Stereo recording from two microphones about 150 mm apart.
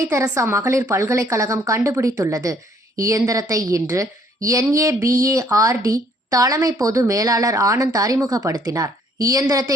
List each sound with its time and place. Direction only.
0.1 s speech: 20° right (ahead or behind)